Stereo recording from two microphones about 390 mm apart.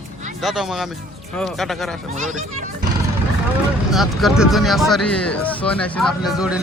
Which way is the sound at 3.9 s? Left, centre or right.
Centre.